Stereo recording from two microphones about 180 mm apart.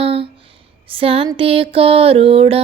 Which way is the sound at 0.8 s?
30° right (ahead or behind).